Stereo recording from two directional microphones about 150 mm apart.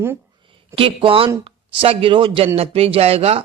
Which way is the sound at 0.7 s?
35° right (ahead or behind).